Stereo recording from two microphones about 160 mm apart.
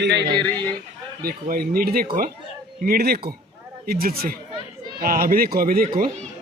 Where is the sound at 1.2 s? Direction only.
70° right (ahead or behind).